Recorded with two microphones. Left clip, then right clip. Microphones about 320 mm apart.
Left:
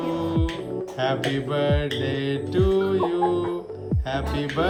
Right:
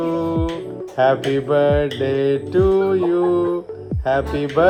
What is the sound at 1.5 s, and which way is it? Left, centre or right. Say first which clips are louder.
Music: right 9 dB; right.